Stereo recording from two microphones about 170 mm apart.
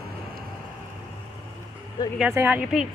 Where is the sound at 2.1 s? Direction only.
10° right (ahead or behind).